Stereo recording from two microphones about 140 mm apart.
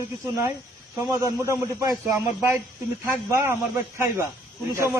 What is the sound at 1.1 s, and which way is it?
Speech, 20° right (ahead or behind).